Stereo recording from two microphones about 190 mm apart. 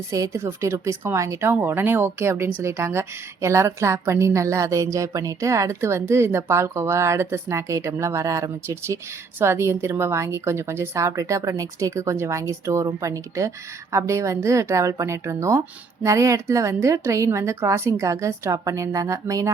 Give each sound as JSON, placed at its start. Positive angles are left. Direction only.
{"t": 0.1, "sound": "a woman's voice", "side_deg": -15}